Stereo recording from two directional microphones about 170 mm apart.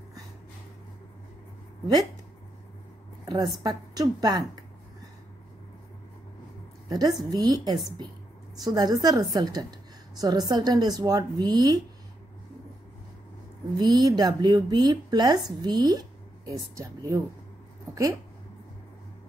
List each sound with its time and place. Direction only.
3.3 s a woman's voice: 20° right (ahead or behind)
6.9 s a woman's voice: 25° right (ahead or behind)
13.7 s a woman's voice: 25° right (ahead or behind)